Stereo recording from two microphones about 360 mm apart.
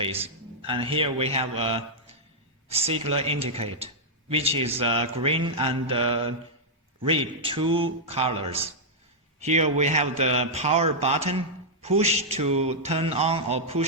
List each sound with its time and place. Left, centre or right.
0.0 s a man's voice: centre